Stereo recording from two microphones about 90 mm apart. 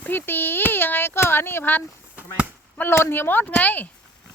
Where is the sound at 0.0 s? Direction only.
20° left (ahead or behind).